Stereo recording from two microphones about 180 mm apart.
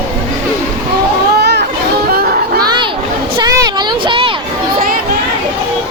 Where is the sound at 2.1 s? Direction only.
55° right (ahead or behind).